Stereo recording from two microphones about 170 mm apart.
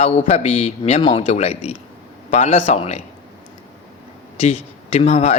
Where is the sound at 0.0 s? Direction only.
35° left (ahead or behind).